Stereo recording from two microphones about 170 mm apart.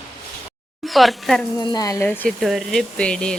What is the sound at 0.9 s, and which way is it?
Speech, centre (ahead or behind).